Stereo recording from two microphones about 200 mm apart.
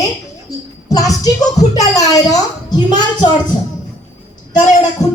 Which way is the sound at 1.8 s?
20° left (ahead or behind).